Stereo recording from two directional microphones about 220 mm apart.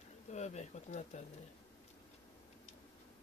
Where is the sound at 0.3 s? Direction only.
30° left (ahead or behind).